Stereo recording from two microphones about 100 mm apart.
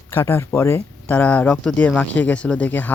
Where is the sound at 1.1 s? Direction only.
15° left (ahead or behind).